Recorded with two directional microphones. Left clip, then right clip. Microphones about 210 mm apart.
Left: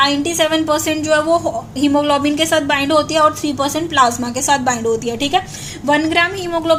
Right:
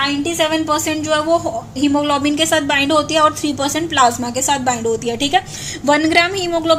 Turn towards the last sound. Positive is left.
turn(degrees=-10)  # may be behind; listen again after turning